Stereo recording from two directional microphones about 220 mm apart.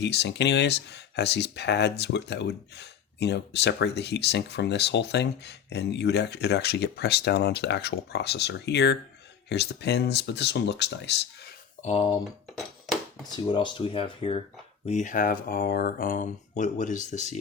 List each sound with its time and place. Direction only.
0.0 s speech: 50° left (ahead or behind)
11.8 s speech: 30° left (ahead or behind)
13.3 s speech: 20° left (ahead or behind)